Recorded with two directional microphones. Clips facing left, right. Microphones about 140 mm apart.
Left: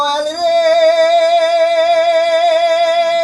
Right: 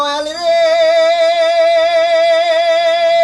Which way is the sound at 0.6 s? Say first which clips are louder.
Even; 45° left (ahead or behind).